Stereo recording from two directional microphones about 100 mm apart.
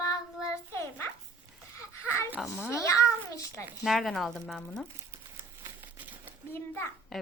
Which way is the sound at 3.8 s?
Centre (ahead or behind).